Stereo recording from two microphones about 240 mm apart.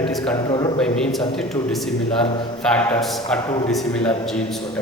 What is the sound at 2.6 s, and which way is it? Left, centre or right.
A man's voice, centre.